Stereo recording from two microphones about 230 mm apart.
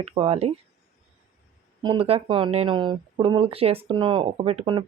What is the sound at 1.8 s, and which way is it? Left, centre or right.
Speech, right.